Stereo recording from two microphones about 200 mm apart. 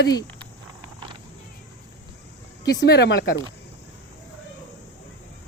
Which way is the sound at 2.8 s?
55° left (ahead or behind).